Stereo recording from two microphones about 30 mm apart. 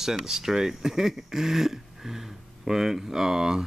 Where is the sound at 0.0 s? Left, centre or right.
Centre.